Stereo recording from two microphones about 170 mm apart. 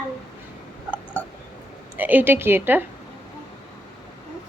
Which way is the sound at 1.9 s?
10° right (ahead or behind).